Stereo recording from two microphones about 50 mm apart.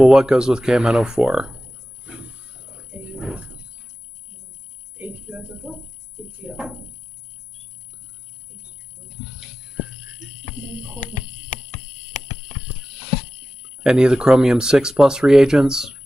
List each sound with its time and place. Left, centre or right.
0.0 s speech: centre
2.0 s roaring cats: centre
6.5 s speech: centre
13.8 s speech: centre